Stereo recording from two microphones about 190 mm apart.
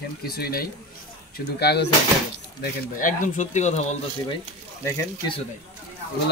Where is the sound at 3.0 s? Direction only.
40° left (ahead or behind).